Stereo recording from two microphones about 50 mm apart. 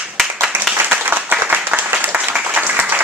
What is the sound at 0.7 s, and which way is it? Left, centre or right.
Applause, right.